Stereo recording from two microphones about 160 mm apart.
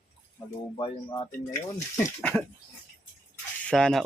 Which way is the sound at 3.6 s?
5° left (ahead or behind).